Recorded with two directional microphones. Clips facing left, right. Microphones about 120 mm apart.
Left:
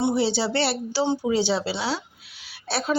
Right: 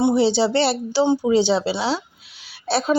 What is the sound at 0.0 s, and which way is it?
A woman's voice, 20° right (ahead or behind).